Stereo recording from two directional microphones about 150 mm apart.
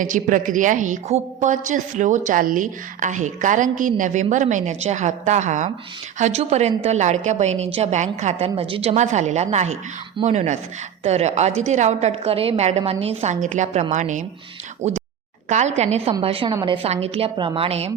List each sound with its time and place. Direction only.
0.0 s a woman's voice: 60° right (ahead or behind); by 17.9 s 45° right (ahead or behind)